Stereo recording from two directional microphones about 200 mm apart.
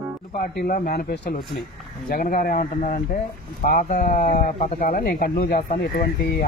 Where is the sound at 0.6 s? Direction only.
50° left (ahead or behind).